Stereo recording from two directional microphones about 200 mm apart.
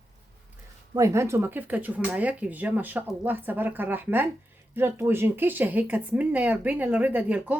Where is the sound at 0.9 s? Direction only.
15° right (ahead or behind).